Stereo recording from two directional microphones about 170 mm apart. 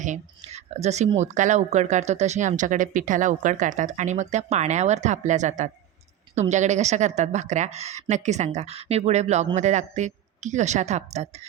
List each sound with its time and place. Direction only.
0.0 s speech: 45° right (ahead or behind)